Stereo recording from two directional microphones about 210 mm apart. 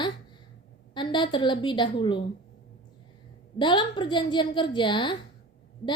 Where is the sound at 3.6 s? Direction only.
20° left (ahead or behind).